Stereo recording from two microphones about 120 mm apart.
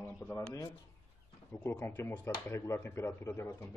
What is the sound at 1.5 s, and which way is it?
Speech, 15° left (ahead or behind).